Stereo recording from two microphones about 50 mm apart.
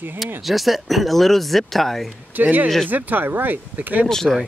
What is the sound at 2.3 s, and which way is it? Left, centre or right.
Speech, right.